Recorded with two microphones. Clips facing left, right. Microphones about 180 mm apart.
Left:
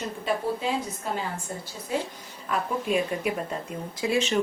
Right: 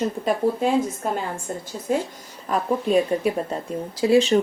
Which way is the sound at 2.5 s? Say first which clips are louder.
Right 6 dB; 35° right (ahead or behind).